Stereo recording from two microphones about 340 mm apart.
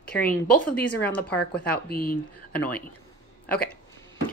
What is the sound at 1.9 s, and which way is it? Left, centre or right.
Speech, left.